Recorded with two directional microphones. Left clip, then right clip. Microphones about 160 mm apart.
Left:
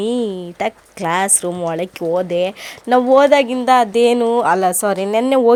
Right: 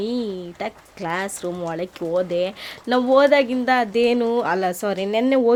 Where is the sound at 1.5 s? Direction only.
20° left (ahead or behind).